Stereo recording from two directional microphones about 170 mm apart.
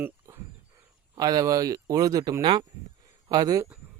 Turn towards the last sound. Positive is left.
turn(degrees=-20)  # may be behind; listen again after turning